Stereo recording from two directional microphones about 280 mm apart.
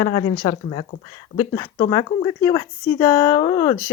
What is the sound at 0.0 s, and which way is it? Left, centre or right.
A woman's voice, centre.